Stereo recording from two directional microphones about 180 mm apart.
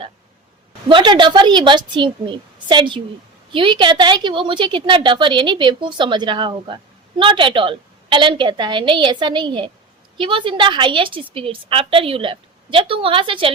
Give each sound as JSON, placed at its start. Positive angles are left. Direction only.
{"t": 0.9, "sound": "a woman's voice", "side_deg": -25}